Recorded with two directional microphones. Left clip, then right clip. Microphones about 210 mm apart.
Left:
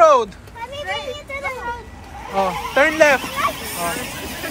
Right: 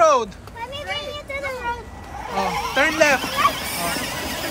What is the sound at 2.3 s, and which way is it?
Speech, 5° right (ahead or behind).